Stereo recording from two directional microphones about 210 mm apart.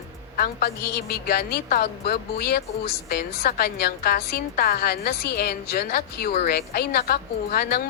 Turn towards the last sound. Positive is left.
turn(degrees=45)  # may be behind; listen again after turning